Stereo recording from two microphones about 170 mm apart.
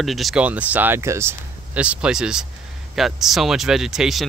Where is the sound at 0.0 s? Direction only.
Centre (ahead or behind).